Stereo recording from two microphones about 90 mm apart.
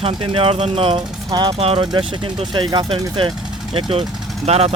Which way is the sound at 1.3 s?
55° right (ahead or behind).